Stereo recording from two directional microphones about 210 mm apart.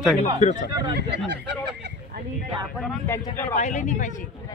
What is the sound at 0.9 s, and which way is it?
Speech, 55° right (ahead or behind).